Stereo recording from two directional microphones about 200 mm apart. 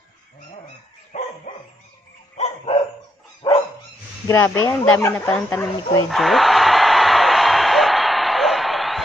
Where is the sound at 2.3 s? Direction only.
35° left (ahead or behind).